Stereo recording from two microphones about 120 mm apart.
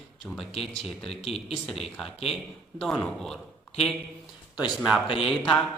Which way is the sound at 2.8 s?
5° left (ahead or behind).